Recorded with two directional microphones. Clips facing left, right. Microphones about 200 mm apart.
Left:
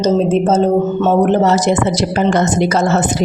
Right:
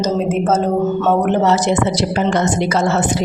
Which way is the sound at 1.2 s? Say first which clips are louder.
Left 2 dB; 40° left (ahead or behind).